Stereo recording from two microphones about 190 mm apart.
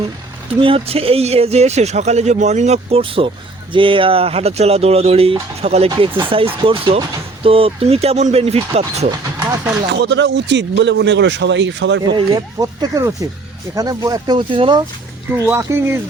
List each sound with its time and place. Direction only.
0.6 s speech: 30° right (ahead or behind)
9.9 s speech: 65° right (ahead or behind)
12.1 s speech: 20° right (ahead or behind)
15.3 s speech: 10° right (ahead or behind)